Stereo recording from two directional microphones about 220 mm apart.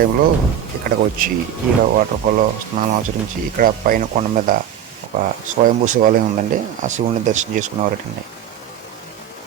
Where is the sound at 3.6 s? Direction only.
40° right (ahead or behind).